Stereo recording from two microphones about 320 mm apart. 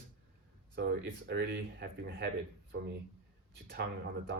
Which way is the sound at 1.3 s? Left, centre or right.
Right.